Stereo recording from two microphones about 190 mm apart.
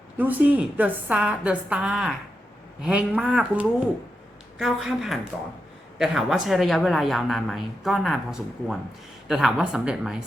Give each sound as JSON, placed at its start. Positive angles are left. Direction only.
{"t": 0.2, "sound": "a woman's voice", "side_deg": -10}